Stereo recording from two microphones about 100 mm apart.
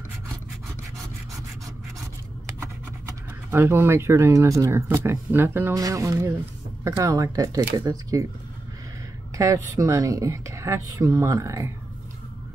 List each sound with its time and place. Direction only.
3.4 s speech: 25° right (ahead or behind)
5.8 s speech: 35° right (ahead or behind)
9.4 s speech: 30° right (ahead or behind)